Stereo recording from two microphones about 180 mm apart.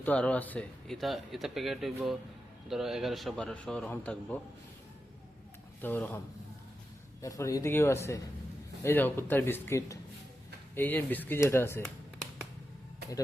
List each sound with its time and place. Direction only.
0.0 s speech: 10° left (ahead or behind)
5.8 s speech: 10° left (ahead or behind)